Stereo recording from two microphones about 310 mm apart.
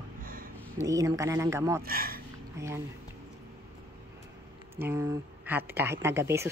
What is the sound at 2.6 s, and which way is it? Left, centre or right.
Speech, centre.